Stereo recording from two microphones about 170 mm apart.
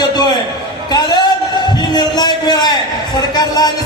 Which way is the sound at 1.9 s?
25° left (ahead or behind).